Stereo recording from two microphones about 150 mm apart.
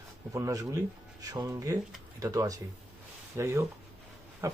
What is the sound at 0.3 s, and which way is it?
Speech, 20° right (ahead or behind).